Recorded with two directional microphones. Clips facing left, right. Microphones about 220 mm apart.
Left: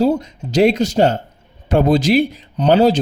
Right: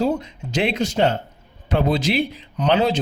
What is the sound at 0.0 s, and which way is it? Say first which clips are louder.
Speech: left 5 dB; 40° left (ahead or behind).